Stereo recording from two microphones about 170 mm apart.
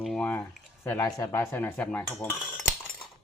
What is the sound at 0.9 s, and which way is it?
Speech, 20° left (ahead or behind).